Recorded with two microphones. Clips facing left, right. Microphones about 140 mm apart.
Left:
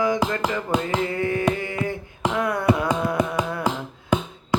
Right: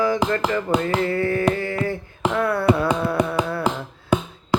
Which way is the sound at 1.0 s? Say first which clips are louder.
Right 3 dB; 15° left (ahead or behind).